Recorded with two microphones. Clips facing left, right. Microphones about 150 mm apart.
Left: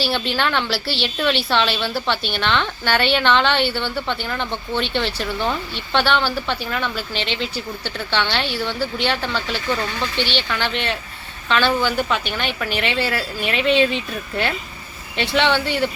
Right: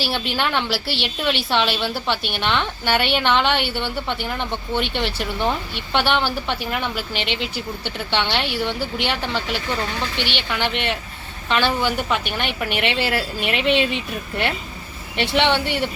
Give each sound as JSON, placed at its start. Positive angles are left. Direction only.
{"t": 0.0, "sound": "a woman's voice", "side_deg": -15}